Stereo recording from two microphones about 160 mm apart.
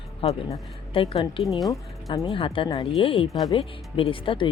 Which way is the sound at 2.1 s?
35° left (ahead or behind).